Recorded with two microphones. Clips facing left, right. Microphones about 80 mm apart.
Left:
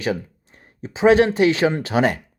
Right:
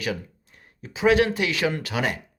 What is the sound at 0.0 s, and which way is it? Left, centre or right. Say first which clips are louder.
Speech: left 5 dB; left.